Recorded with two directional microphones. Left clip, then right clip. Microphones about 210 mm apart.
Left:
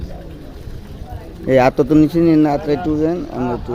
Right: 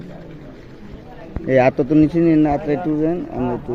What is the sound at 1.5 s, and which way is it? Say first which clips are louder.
Speech: left 2 dB; 15° left (ahead or behind).